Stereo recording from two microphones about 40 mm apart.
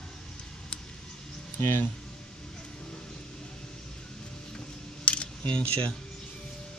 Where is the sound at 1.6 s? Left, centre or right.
Left.